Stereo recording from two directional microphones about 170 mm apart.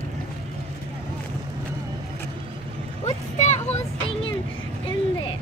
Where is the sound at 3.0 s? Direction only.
45° left (ahead or behind).